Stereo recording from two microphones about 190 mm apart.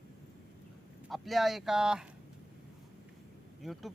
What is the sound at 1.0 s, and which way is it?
Speech, centre (ahead or behind).